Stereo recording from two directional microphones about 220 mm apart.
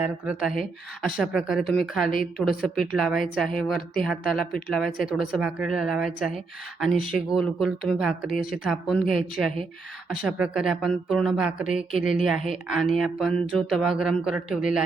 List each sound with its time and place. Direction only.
0.0 s speech: 5° right (ahead or behind)
8.3 s speech: 40° left (ahead or behind)
8.6 s speech: centre (ahead or behind)